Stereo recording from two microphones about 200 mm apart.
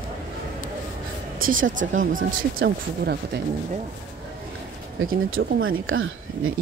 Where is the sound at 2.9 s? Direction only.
55° right (ahead or behind).